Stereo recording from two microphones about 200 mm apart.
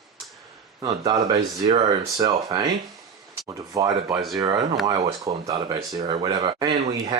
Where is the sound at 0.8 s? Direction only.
25° right (ahead or behind).